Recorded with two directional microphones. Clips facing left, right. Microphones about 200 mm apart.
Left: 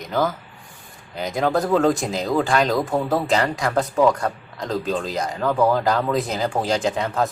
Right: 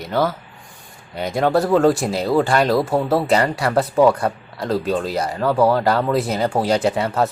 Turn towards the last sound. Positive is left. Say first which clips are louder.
# right 3 dB
turn(degrees=-5)  # may be behind; listen again after turning